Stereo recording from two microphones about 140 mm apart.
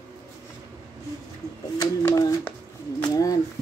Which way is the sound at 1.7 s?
25° left (ahead or behind).